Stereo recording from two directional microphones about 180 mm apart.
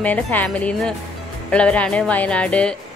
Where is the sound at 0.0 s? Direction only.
10° left (ahead or behind).